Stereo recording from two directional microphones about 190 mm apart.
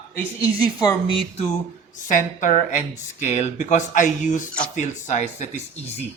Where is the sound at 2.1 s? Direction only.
40° left (ahead or behind).